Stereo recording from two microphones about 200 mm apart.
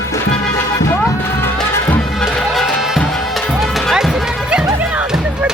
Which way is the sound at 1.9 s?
5° left (ahead or behind).